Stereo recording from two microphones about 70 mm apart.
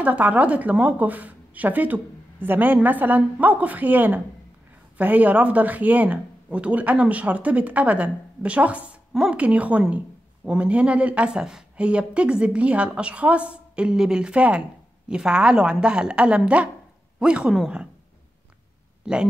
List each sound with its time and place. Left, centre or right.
0.0 s a woman's voice: right
19.1 s a woman's voice: centre